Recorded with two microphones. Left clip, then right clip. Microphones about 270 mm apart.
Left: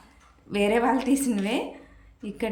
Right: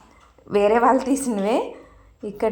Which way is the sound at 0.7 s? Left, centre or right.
Centre.